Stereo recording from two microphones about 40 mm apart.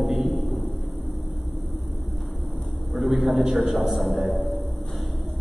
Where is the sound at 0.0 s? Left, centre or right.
Centre.